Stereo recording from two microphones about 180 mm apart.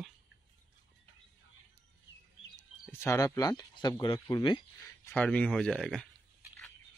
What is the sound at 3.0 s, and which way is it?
Speech, 20° left (ahead or behind).